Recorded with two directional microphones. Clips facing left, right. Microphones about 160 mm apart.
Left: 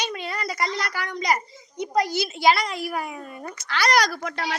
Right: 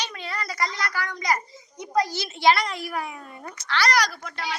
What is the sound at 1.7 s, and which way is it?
Speech, 70° left (ahead or behind).